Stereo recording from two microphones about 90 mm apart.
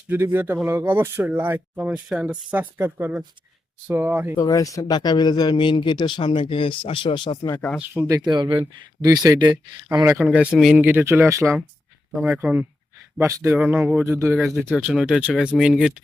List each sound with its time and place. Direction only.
0.1 s speech: 25° right (ahead or behind)
4.4 s speech: 40° left (ahead or behind); by 7.3 s 70° left (ahead or behind)
8.0 s speech: 45° right (ahead or behind)
8.4 s speech: 60° right (ahead or behind)
9.0 s speech: 45° right (ahead or behind)
10.2 s speech: 15° right (ahead or behind); by 11.6 s 35° right (ahead or behind)
12.4 s speech: 20° right (ahead or behind)
14.0 s speech: 30° right (ahead or behind)
14.3 s speech: centre (ahead or behind)
14.8 s speech: 15° right (ahead or behind)